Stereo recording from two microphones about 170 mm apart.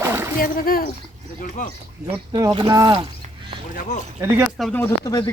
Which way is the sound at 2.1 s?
25° right (ahead or behind).